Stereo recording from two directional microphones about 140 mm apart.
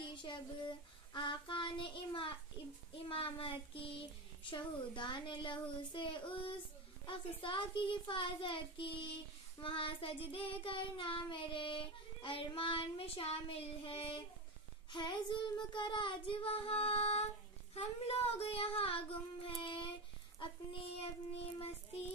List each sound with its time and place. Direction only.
0.1 s female singing: 35° left (ahead or behind)
3.1 s child singing: 40° left (ahead or behind)